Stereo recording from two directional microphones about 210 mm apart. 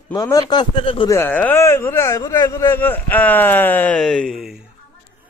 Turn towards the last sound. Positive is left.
turn(degrees=0)  # may be behind; listen again after turning